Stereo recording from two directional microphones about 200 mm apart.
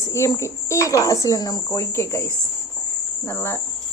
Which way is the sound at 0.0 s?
15° left (ahead or behind).